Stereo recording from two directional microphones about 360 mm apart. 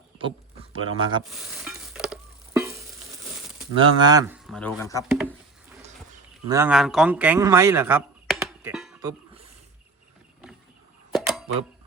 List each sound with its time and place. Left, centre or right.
0.6 s speech: centre
1.2 s stir: centre
3.8 s speech: centre
5.0 s speech: centre
6.5 s a man's voice: centre
11.1 s a sound: centre